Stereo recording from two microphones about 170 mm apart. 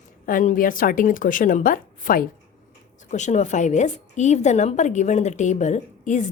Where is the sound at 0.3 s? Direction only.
50° left (ahead or behind).